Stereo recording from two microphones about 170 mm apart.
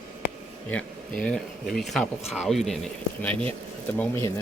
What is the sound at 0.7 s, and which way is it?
Speech, 5° left (ahead or behind).